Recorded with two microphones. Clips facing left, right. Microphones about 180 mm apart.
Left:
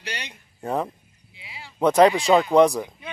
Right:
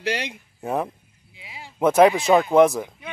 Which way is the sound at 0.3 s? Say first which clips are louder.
Right 1 dB; 5° right (ahead or behind).